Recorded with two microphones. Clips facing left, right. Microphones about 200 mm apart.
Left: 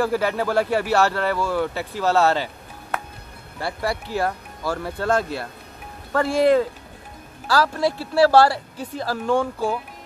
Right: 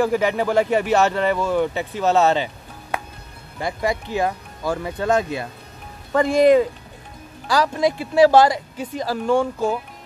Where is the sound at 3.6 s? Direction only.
15° right (ahead or behind).